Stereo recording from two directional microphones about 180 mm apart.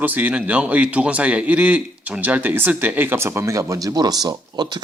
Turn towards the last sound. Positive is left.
turn(degrees=-25)  # may be behind; listen again after turning